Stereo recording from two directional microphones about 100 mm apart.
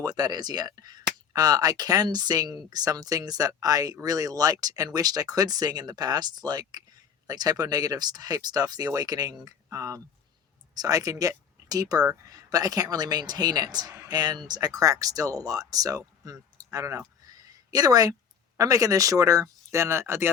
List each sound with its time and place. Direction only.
0.0 s speech: 40° right (ahead or behind); by 20.3 s 25° right (ahead or behind)